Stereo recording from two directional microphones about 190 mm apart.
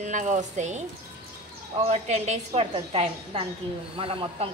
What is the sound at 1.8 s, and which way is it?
Speech, 35° right (ahead or behind).